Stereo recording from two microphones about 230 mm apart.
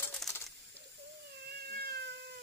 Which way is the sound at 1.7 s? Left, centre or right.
Right.